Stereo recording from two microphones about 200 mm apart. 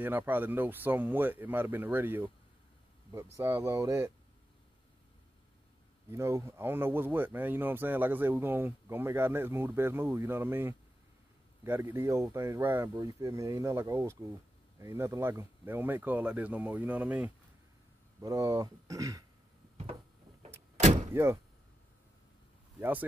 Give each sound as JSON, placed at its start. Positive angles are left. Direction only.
{"t": 0.0, "sound": "speech", "side_deg": -10}
{"t": 3.3, "sound": "speech", "side_deg": -15}
{"t": 6.0, "sound": "speech", "side_deg": -15}
{"t": 21.1, "sound": "speech", "side_deg": -10}
{"t": 22.8, "sound": "speech", "side_deg": -10}